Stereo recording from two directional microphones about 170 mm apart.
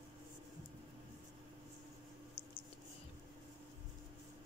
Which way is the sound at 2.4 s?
35° left (ahead or behind).